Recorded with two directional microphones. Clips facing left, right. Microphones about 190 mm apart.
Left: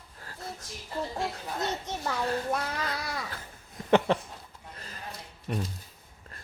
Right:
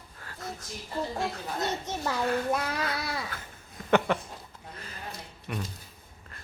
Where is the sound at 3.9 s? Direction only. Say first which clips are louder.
Left 1 dB; 30° left (ahead or behind).